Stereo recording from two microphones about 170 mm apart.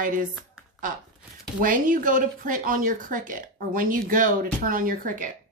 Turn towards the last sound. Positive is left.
turn(degrees=-50)  # may be behind; listen again after turning